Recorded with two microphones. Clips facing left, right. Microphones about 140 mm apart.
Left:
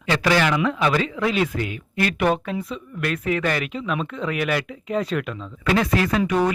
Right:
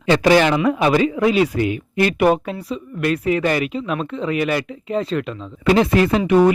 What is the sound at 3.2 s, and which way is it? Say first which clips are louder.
Speech: right 3 dB; 5° right (ahead or behind).